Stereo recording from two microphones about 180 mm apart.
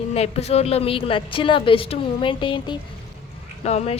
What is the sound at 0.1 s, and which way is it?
A woman's voice, 35° left (ahead or behind).